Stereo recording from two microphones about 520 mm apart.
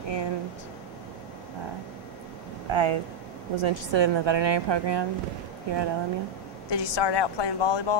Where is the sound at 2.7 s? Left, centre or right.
Right.